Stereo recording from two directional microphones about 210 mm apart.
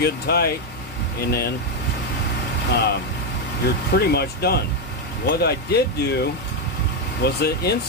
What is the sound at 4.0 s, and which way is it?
Speech, 50° left (ahead or behind).